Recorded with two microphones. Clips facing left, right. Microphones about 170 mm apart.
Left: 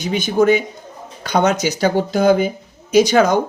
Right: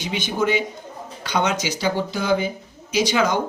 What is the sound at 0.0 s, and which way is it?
Speech, 45° left (ahead or behind).